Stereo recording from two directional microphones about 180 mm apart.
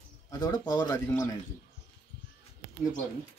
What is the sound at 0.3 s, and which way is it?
Speech, 20° left (ahead or behind).